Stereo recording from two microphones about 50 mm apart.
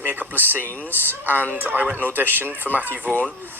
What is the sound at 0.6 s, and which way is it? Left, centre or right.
Speech, left.